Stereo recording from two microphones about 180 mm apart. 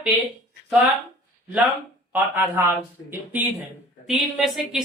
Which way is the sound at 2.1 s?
10° right (ahead or behind).